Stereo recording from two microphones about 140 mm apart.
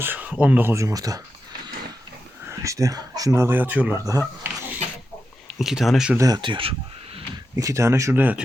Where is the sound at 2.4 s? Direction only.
20° right (ahead or behind).